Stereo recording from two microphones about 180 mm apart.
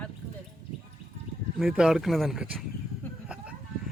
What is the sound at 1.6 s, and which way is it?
Speech, 5° right (ahead or behind).